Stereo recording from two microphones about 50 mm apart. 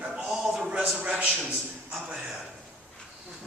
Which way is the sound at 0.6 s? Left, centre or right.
Right.